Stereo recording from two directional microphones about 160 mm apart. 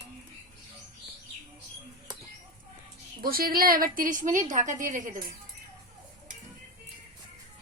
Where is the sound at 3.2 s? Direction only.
65° right (ahead or behind).